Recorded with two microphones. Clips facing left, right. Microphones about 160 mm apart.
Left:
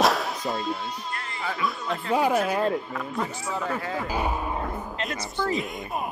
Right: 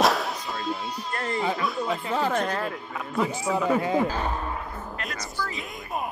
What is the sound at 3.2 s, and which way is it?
Speech, 15° right (ahead or behind).